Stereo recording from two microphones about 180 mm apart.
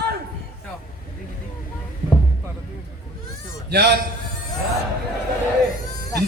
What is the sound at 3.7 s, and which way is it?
Speech, 65° right (ahead or behind).